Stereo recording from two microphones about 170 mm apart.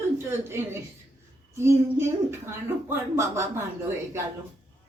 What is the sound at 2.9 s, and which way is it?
Speech, 15° right (ahead or behind).